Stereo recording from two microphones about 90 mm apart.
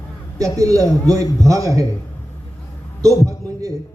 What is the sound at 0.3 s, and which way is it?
A woman's voice, 40° right (ahead or behind).